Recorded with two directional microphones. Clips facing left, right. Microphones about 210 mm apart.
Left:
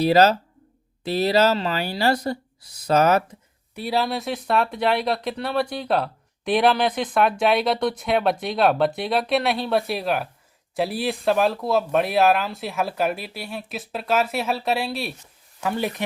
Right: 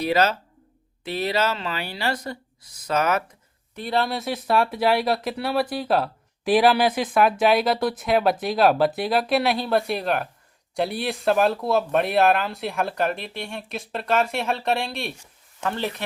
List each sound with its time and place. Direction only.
0.0 s speech: 35° left (ahead or behind)
3.8 s speech: 5° left (ahead or behind)